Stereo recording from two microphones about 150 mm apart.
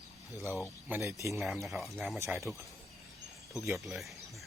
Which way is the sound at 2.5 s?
15° right (ahead or behind).